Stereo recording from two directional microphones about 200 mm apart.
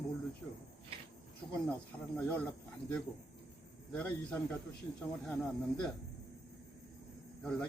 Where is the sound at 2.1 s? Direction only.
5° left (ahead or behind).